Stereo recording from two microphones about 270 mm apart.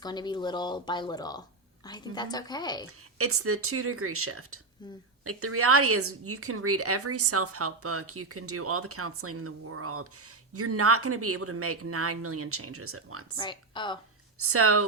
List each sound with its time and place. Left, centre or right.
0.0 s speech: centre
3.2 s a woman's voice: right
13.3 s speech: centre
14.3 s speech: right